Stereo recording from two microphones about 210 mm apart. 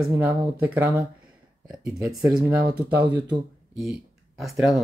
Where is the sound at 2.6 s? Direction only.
50° right (ahead or behind).